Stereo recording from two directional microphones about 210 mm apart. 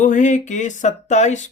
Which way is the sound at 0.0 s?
35° left (ahead or behind).